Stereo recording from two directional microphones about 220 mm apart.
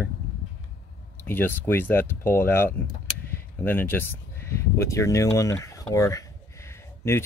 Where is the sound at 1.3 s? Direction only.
10° left (ahead or behind).